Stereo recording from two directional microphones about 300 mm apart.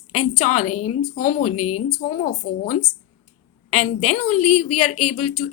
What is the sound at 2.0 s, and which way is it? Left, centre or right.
A woman's voice, left.